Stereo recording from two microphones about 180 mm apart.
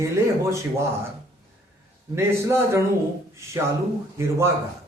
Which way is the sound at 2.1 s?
15° right (ahead or behind).